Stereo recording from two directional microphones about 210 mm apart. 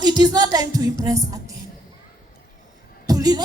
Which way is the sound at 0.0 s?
20° right (ahead or behind).